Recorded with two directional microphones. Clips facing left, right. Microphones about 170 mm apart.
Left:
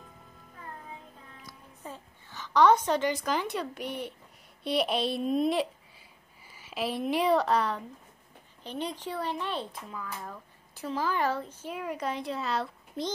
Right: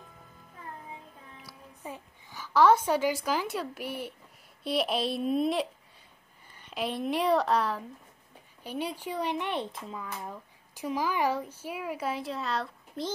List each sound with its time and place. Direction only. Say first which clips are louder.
1.4 s a woman's voice: right 1 dB; 10° right (ahead or behind)
10.2 s a woman's voice: right 2 dB; 15° right (ahead or behind)